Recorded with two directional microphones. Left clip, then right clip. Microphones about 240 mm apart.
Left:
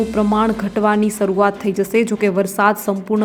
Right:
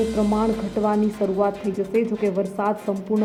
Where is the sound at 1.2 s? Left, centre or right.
Left.